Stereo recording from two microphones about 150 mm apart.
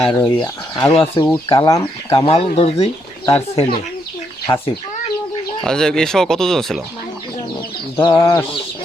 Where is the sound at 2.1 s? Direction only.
40° left (ahead or behind).